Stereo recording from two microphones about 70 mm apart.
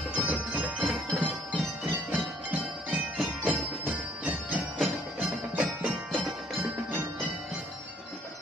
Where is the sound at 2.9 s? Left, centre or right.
Centre.